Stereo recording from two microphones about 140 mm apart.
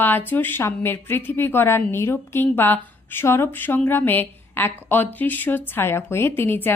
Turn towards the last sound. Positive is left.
turn(degrees=15)  # may be behind; listen again after turning